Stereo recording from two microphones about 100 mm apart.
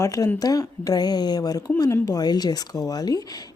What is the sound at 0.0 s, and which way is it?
Speech, 35° left (ahead or behind).